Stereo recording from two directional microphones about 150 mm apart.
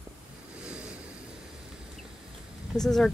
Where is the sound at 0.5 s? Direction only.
10° right (ahead or behind).